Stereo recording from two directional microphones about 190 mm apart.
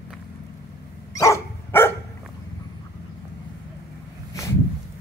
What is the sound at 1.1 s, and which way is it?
Dog, 15° left (ahead or behind).